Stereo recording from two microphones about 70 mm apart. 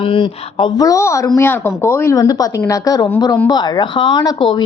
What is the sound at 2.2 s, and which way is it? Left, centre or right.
Speech, left.